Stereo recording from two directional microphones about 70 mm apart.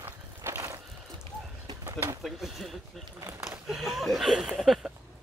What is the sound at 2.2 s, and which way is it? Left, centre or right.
Speech, centre.